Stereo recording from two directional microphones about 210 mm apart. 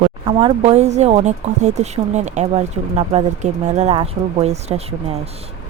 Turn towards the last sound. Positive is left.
turn(degrees=-30)  # may be behind; listen again after turning